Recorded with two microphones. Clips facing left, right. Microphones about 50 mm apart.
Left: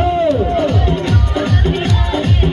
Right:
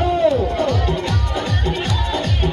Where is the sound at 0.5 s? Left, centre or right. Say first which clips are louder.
Left 4 dB; left.